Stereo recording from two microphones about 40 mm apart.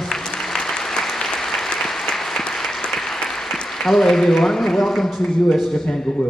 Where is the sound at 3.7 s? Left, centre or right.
Centre.